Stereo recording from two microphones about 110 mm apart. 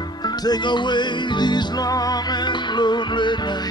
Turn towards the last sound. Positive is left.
turn(degrees=45)  # may be behind; listen again after turning